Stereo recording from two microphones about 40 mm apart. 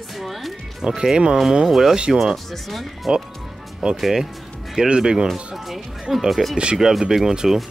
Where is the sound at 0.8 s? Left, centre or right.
Centre.